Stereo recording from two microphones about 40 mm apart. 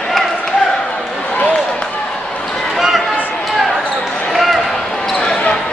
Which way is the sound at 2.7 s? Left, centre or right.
Centre.